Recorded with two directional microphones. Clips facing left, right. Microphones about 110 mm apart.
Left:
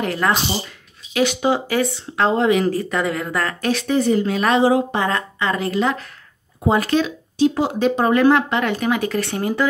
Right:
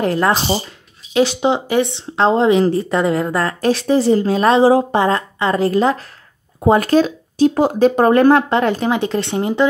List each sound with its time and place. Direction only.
0.0 s speech: 35° right (ahead or behind)